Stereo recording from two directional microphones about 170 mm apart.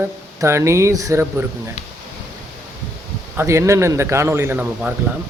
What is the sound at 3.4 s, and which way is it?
Speech, 15° right (ahead or behind).